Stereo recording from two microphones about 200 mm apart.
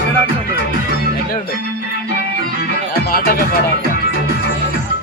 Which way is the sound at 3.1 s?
45° left (ahead or behind).